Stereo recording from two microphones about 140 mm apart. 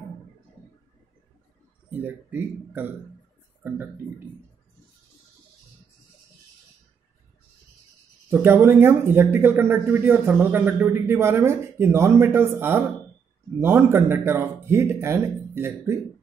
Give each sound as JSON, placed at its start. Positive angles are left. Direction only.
{"t": 1.9, "sound": "speech", "side_deg": -15}
{"t": 8.3, "sound": "speech", "side_deg": -15}